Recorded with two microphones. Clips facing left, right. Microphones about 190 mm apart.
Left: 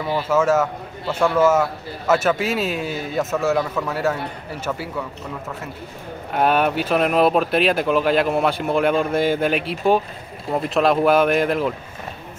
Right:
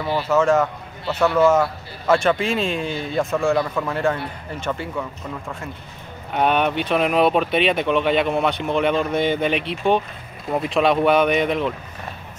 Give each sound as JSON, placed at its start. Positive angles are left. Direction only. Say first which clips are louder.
{"t": 0.0, "sound": "a man's voice", "louder": "even", "side_deg": 10}
{"t": 6.3, "sound": "a man's voice", "louder": "left 1 dB", "side_deg": 5}